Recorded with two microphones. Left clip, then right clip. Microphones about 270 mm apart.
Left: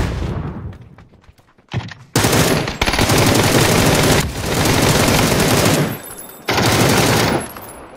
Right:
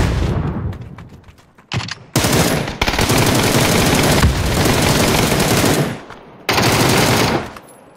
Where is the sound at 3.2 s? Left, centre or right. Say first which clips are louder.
Left 2 dB; centre.